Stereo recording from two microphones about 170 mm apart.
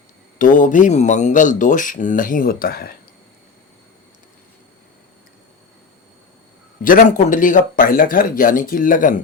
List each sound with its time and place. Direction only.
0.3 s speech: 50° left (ahead or behind)
6.8 s speech: 50° left (ahead or behind)